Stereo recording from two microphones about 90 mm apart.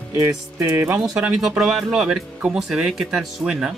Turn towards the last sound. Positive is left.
turn(degrees=-10)  # may be behind; listen again after turning